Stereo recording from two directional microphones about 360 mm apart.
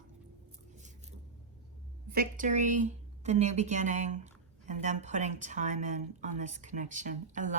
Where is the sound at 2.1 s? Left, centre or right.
Right.